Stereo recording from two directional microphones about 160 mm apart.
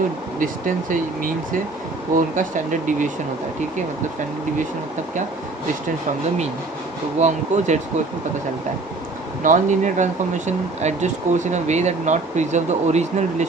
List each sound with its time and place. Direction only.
0.3 s speech: 60° right (ahead or behind)
7.2 s speech: 45° right (ahead or behind)
9.4 s speech: 50° right (ahead or behind)